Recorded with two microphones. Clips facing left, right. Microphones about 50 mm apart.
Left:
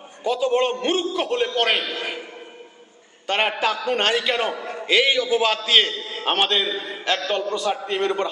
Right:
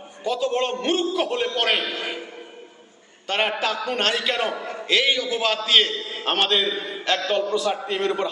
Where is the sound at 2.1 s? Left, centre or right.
Left.